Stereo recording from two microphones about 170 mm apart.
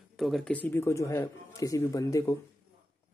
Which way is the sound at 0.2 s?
5° left (ahead or behind).